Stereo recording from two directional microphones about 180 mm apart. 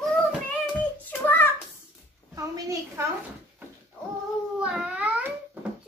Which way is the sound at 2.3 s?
15° right (ahead or behind).